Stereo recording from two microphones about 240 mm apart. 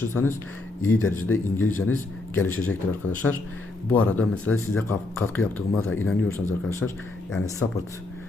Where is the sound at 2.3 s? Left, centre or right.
Centre.